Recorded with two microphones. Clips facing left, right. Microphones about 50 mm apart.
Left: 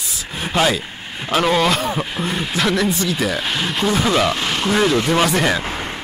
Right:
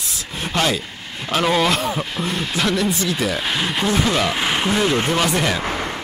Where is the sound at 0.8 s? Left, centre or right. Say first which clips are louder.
Left 2 dB; centre.